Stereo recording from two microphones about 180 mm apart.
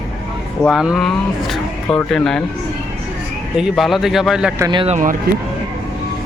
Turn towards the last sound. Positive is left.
turn(degrees=-55)  # may be behind; listen again after turning